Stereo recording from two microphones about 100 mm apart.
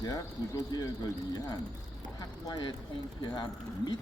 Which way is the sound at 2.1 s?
45° left (ahead or behind).